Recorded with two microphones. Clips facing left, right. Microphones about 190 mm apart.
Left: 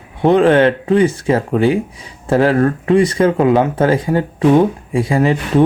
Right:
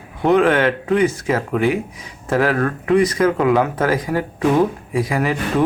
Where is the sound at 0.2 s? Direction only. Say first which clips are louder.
Left 4 dB; 30° left (ahead or behind).